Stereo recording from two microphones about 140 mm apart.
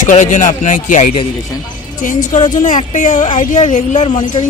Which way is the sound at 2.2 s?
60° left (ahead or behind).